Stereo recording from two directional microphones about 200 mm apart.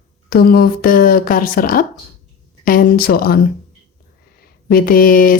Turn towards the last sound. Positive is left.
turn(degrees=45)  # may be behind; listen again after turning